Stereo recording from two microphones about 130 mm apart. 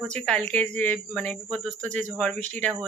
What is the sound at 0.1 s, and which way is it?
Speech, 10° left (ahead or behind).